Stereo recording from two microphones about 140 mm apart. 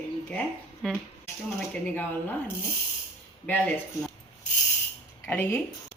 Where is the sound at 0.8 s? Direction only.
5° left (ahead or behind).